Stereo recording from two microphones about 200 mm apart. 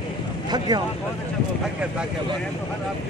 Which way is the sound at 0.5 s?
20° right (ahead or behind).